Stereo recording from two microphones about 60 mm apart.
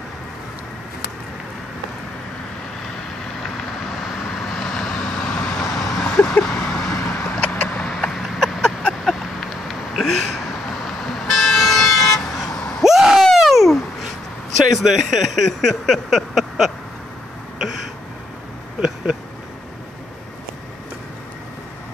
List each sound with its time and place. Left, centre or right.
4.5 s vehicle: centre
5.6 s vehicle: centre
7.8 s a sound: centre
11.2 s vehicle: centre
12.8 s a sound: centre
13.2 s baby cry: centre
14.8 s speech: centre